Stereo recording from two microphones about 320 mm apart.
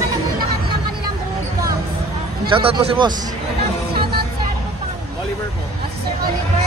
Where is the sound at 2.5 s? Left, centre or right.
Centre.